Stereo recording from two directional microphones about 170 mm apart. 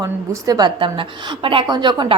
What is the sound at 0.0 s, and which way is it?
A woman's voice, 20° right (ahead or behind).